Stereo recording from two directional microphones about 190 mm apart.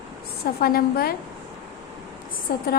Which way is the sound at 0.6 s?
50° left (ahead or behind).